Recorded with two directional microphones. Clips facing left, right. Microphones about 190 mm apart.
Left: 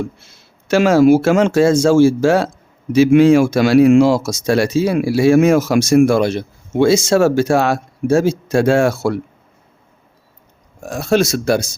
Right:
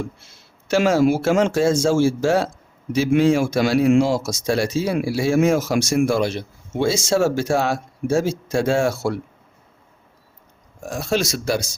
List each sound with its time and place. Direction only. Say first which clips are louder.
0.7 s speech: left 6 dB; 75° left (ahead or behind)
10.8 s speech: left 7 dB; 60° left (ahead or behind)